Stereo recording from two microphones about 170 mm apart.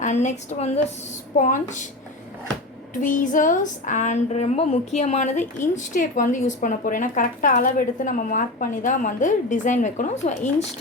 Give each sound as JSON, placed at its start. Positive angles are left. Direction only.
{"t": 0.0, "sound": "speech", "side_deg": 45}
{"t": 2.9, "sound": "speech", "side_deg": 50}